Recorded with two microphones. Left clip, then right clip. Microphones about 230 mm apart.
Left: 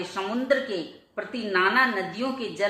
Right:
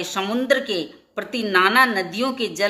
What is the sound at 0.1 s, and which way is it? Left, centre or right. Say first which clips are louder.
A woman's voice: right 5 dB; right.